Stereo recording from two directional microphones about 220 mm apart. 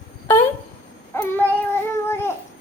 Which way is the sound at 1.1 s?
10° left (ahead or behind).